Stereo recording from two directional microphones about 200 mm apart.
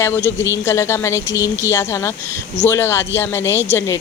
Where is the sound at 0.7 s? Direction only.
15° left (ahead or behind).